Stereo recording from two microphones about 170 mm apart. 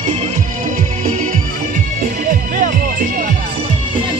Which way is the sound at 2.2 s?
50° right (ahead or behind).